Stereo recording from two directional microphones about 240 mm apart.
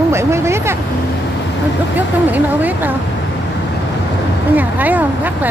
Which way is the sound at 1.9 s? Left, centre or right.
Centre.